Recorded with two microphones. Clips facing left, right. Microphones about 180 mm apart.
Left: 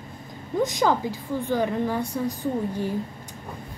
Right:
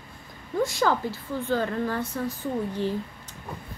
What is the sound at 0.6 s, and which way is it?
Speech, 20° left (ahead or behind).